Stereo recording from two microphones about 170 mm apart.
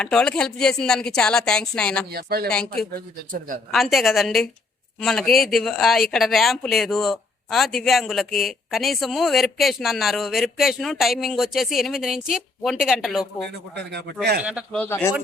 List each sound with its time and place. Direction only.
0.0 s speech: 5° left (ahead or behind)
2.0 s speech: 65° right (ahead or behind)
2.5 s speech: 5° left (ahead or behind)
2.9 s speech: 55° right (ahead or behind)
3.7 s speech: centre (ahead or behind)
14.8 s speech: 10° left (ahead or behind)